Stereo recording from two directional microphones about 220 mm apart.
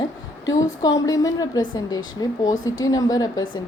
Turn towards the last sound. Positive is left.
turn(degrees=15)  # may be behind; listen again after turning